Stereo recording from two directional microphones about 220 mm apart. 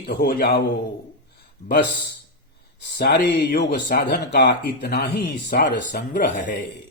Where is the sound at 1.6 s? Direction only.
30° left (ahead or behind).